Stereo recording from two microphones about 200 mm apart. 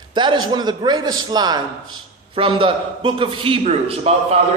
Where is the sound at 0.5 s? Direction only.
20° right (ahead or behind).